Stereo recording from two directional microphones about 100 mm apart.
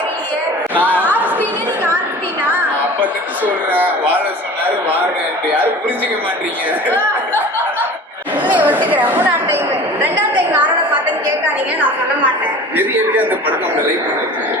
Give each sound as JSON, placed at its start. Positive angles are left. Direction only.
{"t": 0.8, "sound": "speech", "side_deg": -15}
{"t": 3.4, "sound": "speech", "side_deg": -15}
{"t": 6.8, "sound": "a sound", "side_deg": -15}
{"t": 8.4, "sound": "a woman's voice", "side_deg": -15}